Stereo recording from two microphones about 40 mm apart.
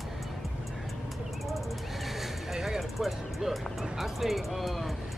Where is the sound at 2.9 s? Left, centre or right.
Centre.